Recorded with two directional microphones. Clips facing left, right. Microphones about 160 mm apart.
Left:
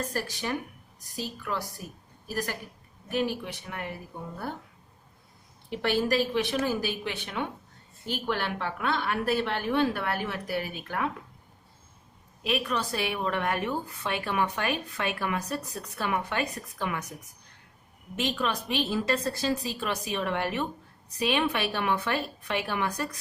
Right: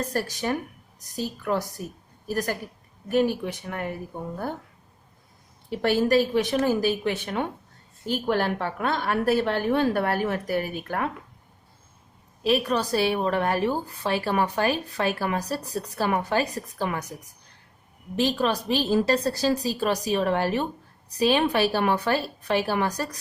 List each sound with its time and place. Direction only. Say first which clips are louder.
0.1 s a woman's voice: right 5 dB; 40° right (ahead or behind)
5.8 s a woman's voice: right 5 dB; 40° right (ahead or behind)
12.4 s a woman's voice: right 6 dB; 35° right (ahead or behind)
18.2 s a woman's voice: right 6 dB; 35° right (ahead or behind)